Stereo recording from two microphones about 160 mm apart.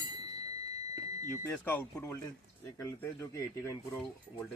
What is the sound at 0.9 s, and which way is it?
Smoke detector, 20° right (ahead or behind).